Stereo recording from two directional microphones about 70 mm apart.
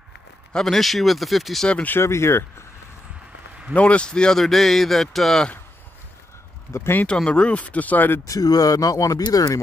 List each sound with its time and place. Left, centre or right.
0.5 s a man's voice: centre
1.7 s speech: left
2.0 s speech: left
3.7 s a man's voice: centre
6.7 s speech: left
7.2 s speech: centre
8.3 s speech: left